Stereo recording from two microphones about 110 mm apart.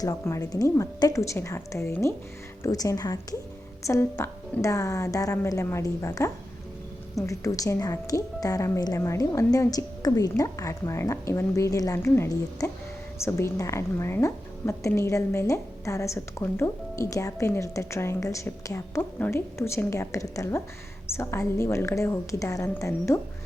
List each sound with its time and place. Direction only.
0.0 s a woman's voice: 30° left (ahead or behind)